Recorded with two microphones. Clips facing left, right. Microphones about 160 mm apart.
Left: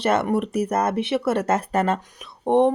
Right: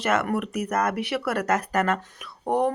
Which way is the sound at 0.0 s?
30° left (ahead or behind).